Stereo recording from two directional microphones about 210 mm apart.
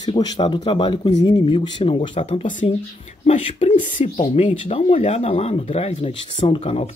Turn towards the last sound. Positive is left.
turn(degrees=30)  # may be behind; listen again after turning